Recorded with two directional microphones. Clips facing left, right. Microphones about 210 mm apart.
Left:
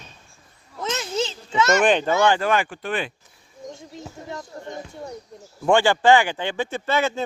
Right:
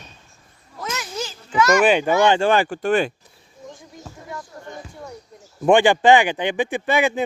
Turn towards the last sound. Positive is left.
turn(degrees=-15)  # may be behind; listen again after turning